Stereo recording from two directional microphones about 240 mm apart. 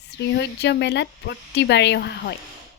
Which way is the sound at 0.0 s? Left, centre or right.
Left.